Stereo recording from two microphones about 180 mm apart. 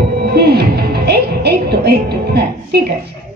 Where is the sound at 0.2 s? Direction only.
65° right (ahead or behind).